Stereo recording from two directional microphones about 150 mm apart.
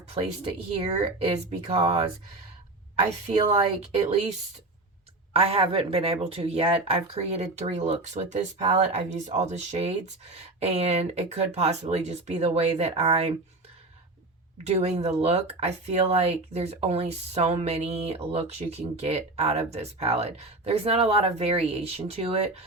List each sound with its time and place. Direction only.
0.9 s speech: 45° right (ahead or behind)
5.3 s speech: 40° right (ahead or behind)
14.7 s speech: 45° right (ahead or behind)